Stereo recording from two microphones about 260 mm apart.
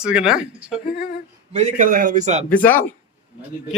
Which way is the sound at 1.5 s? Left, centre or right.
Right.